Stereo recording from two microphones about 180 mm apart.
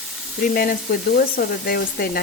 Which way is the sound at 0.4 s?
50° left (ahead or behind).